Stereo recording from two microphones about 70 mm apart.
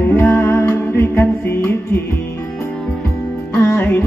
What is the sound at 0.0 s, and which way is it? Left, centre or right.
Music, left.